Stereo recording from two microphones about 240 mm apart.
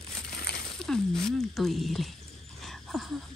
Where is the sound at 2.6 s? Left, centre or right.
Centre.